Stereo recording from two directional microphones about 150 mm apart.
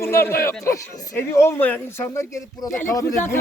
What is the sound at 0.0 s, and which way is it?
A man's voice, 15° left (ahead or behind).